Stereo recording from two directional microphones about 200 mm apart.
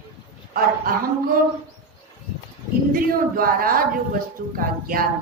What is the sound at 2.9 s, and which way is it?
A woman's voice, 45° right (ahead or behind).